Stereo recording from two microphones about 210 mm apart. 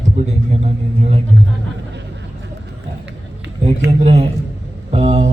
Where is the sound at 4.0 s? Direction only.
30° right (ahead or behind).